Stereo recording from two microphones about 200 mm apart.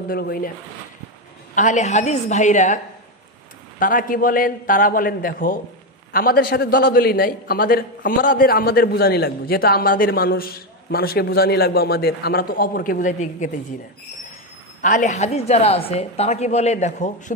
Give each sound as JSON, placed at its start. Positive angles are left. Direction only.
{"t": 0.1, "sound": "a man's voice", "side_deg": 50}
{"t": 1.5, "sound": "a woman's voice", "side_deg": 40}
{"t": 3.8, "sound": "a man's voice", "side_deg": 45}
{"t": 14.8, "sound": "a woman's voice", "side_deg": 40}